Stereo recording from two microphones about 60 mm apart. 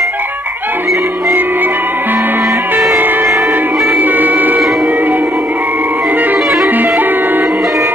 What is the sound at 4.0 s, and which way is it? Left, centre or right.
Music, right.